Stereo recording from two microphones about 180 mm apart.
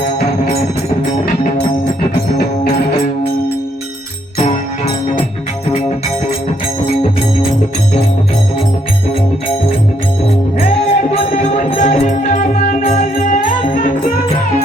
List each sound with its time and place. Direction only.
10.7 s music: 35° left (ahead or behind)